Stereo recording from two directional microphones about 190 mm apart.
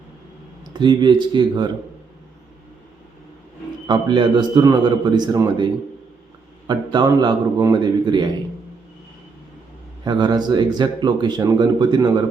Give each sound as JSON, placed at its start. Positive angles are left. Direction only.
{"t": 0.7, "sound": "speech", "side_deg": -25}
{"t": 3.8, "sound": "speech", "side_deg": -25}
{"t": 6.7, "sound": "speech", "side_deg": -20}
{"t": 10.0, "sound": "speech", "side_deg": -20}